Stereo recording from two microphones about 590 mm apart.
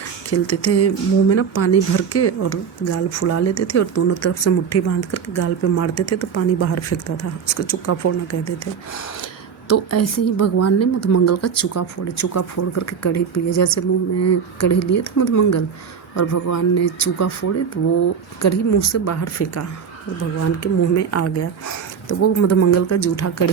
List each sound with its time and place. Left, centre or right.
0.3 s speech: left
9.6 s speech: left